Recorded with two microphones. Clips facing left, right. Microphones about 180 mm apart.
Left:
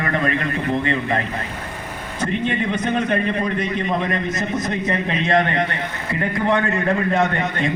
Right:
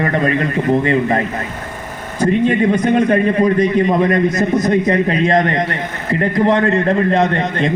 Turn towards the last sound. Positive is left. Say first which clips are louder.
# right 5 dB
turn(degrees=-30)  # may be behind; listen again after turning